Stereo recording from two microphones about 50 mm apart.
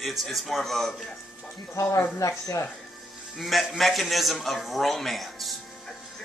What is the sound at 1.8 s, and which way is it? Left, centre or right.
Speech, left.